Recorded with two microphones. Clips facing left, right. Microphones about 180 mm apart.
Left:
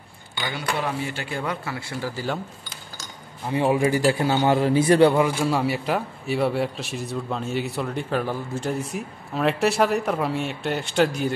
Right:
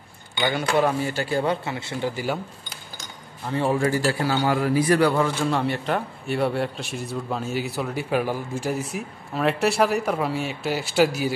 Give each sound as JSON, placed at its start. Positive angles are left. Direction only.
{"t": 0.6, "sound": "speech", "side_deg": -45}
{"t": 3.4, "sound": "a man's voice", "side_deg": 15}
{"t": 5.2, "sound": "speech", "side_deg": 10}